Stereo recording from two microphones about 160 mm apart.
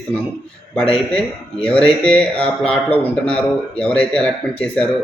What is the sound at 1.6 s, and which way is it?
Speech, 5° left (ahead or behind).